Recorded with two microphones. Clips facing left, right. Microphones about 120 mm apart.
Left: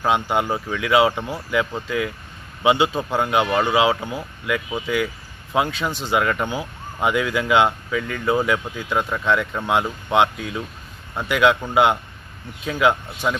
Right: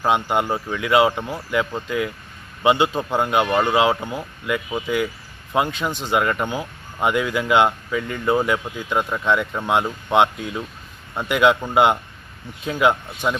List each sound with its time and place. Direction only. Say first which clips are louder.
0.0 s speech: even; centre (ahead or behind)
3.0 s speech: right 1 dB; 15° right (ahead or behind)
3.3 s speech: right 1 dB; centre (ahead or behind)
5.5 s speech: even; 5° left (ahead or behind)
5.9 s speech: right 1 dB; 20° right (ahead or behind)
6.1 s speech: even; 5° right (ahead or behind)
6.5 s speech: even; 5° left (ahead or behind)